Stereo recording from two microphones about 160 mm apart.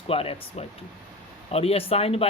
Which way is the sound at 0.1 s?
35° left (ahead or behind).